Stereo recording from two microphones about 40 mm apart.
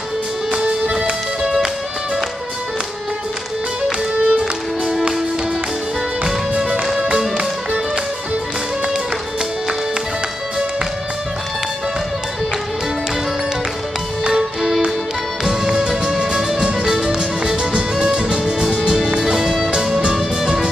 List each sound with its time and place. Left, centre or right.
0.5 s music: right
4.3 s music: centre
6.6 s music: centre
14.2 s music: centre
16.3 s music: centre